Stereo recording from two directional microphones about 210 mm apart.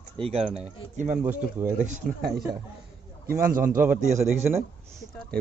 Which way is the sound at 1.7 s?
35° right (ahead or behind).